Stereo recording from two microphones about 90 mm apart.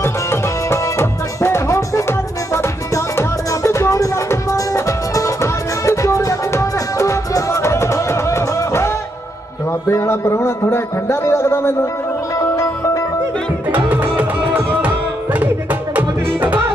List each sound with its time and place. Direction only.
0.0 s music: 30° left (ahead or behind)
9.7 s speech: 30° left (ahead or behind)
12.5 s music: 35° left (ahead or behind)
13.7 s music: 20° right (ahead or behind)